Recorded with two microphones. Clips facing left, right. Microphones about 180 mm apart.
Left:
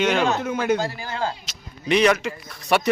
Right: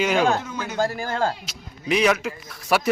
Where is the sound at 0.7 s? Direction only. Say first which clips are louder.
Right 2 dB; 50° right (ahead or behind).